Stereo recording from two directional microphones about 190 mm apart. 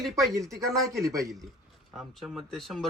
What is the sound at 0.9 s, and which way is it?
Speech, 15° right (ahead or behind).